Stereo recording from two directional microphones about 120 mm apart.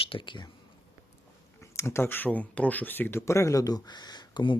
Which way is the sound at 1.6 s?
20° left (ahead or behind).